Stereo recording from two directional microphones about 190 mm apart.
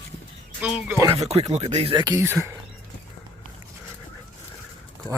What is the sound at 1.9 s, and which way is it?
Speech, 20° right (ahead or behind).